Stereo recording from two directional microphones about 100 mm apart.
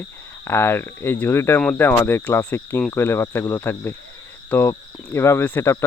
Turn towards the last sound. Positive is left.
turn(degrees=25)  # may be behind; listen again after turning